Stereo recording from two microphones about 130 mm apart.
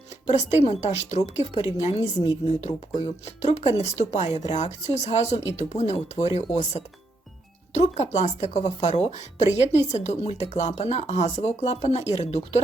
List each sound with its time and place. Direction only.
0.3 s speech: 60° left (ahead or behind)